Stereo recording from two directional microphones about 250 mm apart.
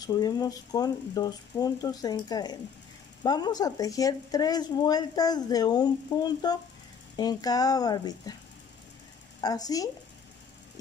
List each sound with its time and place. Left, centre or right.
0.0 s speech: centre
9.4 s speech: centre